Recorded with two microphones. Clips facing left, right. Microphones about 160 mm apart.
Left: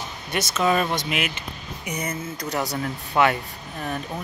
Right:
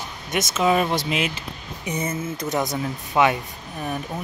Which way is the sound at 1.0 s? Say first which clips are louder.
Right 2 dB; 30° right (ahead or behind).